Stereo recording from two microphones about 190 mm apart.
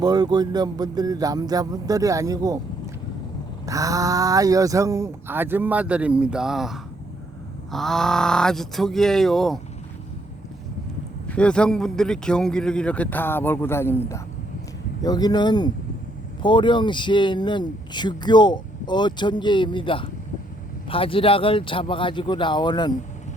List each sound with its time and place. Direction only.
0.0 s a man's voice: 20° right (ahead or behind); by 9.6 s centre (ahead or behind)
11.3 s a man's voice: 5° left (ahead or behind); by 23.0 s 20° left (ahead or behind)